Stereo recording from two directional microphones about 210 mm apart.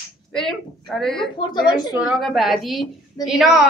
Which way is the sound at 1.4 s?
20° left (ahead or behind).